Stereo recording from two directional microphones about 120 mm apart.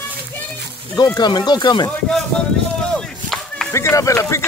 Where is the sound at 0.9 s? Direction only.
35° left (ahead or behind).